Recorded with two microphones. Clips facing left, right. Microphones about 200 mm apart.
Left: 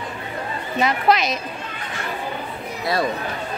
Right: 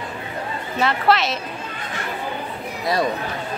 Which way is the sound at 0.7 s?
15° left (ahead or behind).